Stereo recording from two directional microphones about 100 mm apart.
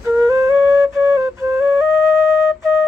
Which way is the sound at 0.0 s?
30° right (ahead or behind).